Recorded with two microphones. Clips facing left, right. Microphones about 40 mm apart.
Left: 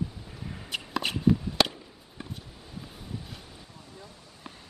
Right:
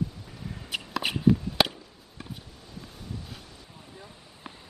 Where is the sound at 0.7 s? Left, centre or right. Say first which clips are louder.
Right 1 dB; centre.